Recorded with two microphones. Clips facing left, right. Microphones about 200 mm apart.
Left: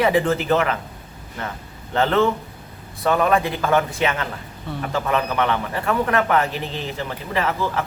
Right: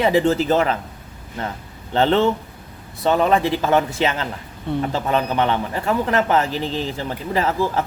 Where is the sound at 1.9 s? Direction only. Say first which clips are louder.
Right 2 dB; 30° right (ahead or behind).